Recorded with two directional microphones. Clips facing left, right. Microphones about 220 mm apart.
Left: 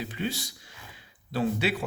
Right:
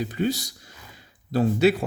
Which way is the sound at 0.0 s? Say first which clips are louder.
Right 7 dB; 40° right (ahead or behind).